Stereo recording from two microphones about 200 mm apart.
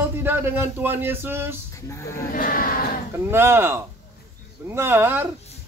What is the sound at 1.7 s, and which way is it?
Speech, 15° left (ahead or behind).